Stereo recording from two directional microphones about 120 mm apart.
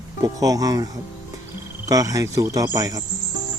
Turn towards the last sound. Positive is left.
turn(degrees=-30)  # may be behind; listen again after turning